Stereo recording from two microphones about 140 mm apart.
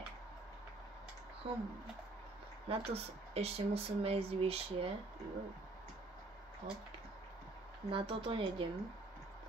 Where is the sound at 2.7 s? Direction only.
45° right (ahead or behind).